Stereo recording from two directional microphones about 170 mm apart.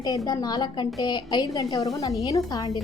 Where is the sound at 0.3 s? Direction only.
20° left (ahead or behind).